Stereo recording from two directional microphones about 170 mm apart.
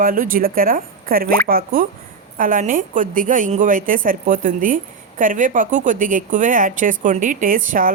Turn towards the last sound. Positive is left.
turn(degrees=-55)  # may be behind; listen again after turning